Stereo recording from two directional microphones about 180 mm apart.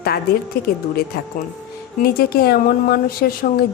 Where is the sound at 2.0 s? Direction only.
60° left (ahead or behind).